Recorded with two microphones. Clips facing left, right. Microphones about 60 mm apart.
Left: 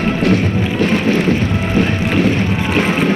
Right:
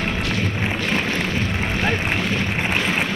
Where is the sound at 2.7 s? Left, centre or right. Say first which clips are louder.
Left 8 dB; left.